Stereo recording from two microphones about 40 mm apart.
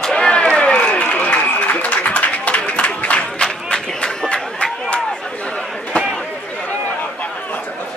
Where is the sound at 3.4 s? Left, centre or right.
Centre.